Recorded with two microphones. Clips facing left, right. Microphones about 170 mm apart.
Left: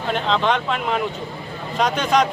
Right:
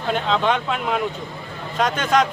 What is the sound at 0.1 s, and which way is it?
Speech, 5° right (ahead or behind).